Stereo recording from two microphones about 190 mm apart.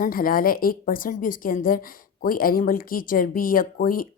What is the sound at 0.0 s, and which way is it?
A woman's voice, 50° left (ahead or behind).